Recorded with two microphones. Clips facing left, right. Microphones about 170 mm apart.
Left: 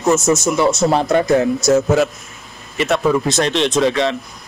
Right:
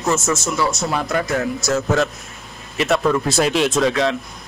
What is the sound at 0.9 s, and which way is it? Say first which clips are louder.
Speech: left 7 dB; 25° left (ahead or behind).